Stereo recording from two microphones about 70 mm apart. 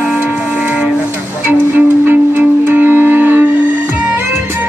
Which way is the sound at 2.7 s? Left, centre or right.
Right.